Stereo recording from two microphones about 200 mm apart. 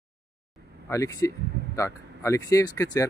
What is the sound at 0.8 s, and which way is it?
Speech, 15° left (ahead or behind).